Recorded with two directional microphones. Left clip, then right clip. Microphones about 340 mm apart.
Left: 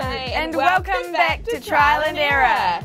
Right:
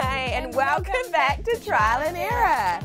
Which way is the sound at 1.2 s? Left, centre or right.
Right.